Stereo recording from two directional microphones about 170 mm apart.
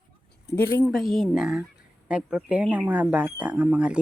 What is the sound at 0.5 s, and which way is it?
Speech, 10° left (ahead or behind).